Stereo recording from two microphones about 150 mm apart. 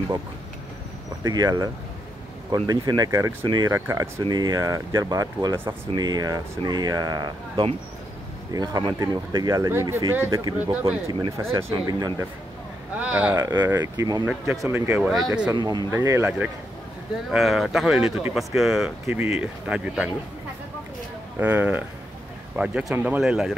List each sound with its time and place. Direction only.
1.2 s speech: 25° right (ahead or behind)
11.1 s speech: 25° right (ahead or behind)
13.0 s speech: 10° right (ahead or behind)
13.4 s speech: 25° right (ahead or behind)
15.5 s speech: 25° right (ahead or behind)
17.3 s speech: centre (ahead or behind)
19.0 s speech: 15° right (ahead or behind)
21.4 s speech: 10° right (ahead or behind)